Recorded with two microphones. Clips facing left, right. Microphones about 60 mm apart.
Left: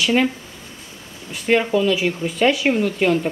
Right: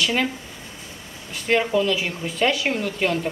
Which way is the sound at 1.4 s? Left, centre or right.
Centre.